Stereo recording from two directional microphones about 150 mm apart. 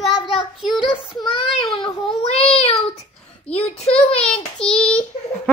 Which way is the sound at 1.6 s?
5° left (ahead or behind).